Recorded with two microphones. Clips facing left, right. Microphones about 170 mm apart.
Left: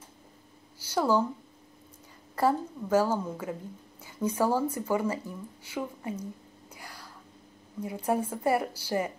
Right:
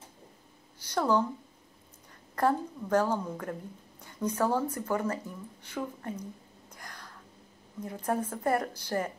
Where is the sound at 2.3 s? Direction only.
5° left (ahead or behind).